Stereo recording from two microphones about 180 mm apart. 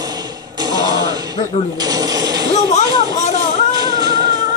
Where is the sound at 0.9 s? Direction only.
20° right (ahead or behind).